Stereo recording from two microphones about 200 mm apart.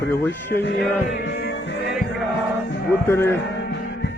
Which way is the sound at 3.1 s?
10° left (ahead or behind).